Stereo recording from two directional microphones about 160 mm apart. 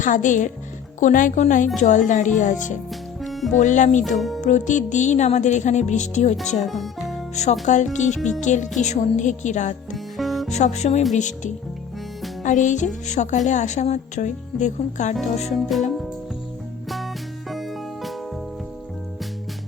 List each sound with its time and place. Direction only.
0.0 s a woman's voice: 55° left (ahead or behind)
3.2 s music: centre (ahead or behind)
3.5 s a woman's voice: 50° left (ahead or behind)
4.0 s a child's voice: centre (ahead or behind)
4.4 s a woman's voice: 50° left (ahead or behind)
6.6 s speech: centre (ahead or behind)
7.6 s a woman's voice: 50° left (ahead or behind)
9.9 s music: centre (ahead or behind)
10.5 s a woman's voice: 45° left (ahead or behind)
12.4 s music: 50° left (ahead or behind)
13.1 s a woman's voice: 50° left (ahead or behind)
15.5 s a child's voice: centre (ahead or behind)
17.5 s music: centre (ahead or behind)